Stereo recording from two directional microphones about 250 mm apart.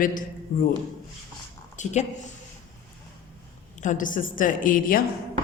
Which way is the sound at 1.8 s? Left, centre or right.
Left.